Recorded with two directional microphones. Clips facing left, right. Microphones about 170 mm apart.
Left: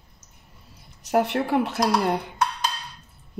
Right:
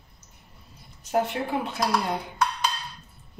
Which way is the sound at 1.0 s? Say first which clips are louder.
Left 4 dB; 70° left (ahead or behind).